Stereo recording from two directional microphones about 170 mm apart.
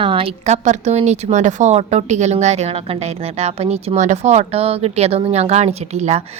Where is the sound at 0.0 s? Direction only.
30° right (ahead or behind).